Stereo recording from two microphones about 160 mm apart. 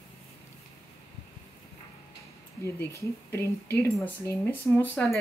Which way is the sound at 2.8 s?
15° left (ahead or behind).